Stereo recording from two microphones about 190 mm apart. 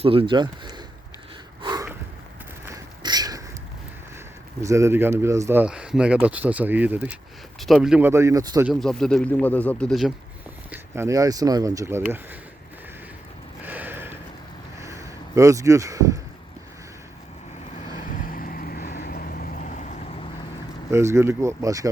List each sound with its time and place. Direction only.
0.0 s speech: 30° right (ahead or behind)
1.6 s snort: 20° right (ahead or behind)
2.6 s a sound: 20° right (ahead or behind)
4.6 s speech: 15° right (ahead or behind)
8.7 s speech: 5° left (ahead or behind)
10.7 s speech: 15° right (ahead or behind)
13.7 s a sound: 10° right (ahead or behind)
14.8 s vehicle: 15° right (ahead or behind)
18.1 s vehicle: 45° left (ahead or behind)
20.9 s speech: 15° right (ahead or behind)